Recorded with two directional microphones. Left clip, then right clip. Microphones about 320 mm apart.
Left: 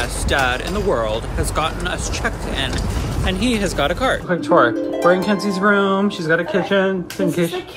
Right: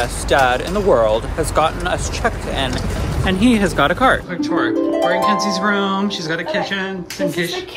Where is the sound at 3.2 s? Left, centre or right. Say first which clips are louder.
Right 4 dB; centre.